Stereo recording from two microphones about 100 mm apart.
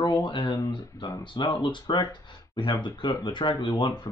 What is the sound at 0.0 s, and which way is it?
Speech, 45° left (ahead or behind).